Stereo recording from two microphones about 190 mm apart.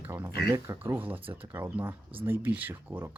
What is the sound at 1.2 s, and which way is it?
Speech, 30° right (ahead or behind).